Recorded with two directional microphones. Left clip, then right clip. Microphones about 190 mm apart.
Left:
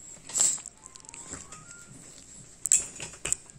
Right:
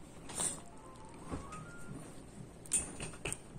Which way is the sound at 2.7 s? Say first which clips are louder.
Left 12 dB; 45° left (ahead or behind).